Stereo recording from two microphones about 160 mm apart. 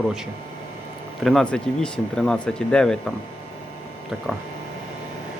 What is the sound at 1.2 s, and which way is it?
Speech, centre (ahead or behind).